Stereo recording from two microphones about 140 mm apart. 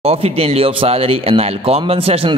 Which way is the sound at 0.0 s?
45° right (ahead or behind).